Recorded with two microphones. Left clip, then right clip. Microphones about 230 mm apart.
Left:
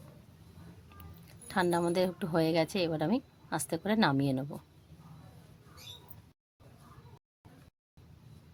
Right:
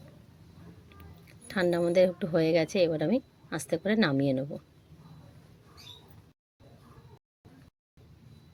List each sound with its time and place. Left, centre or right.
1.5 s a woman's voice: centre